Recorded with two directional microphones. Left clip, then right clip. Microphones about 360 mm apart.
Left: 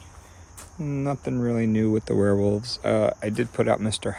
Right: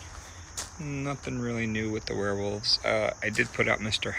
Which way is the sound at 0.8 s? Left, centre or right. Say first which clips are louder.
Left 7 dB; centre.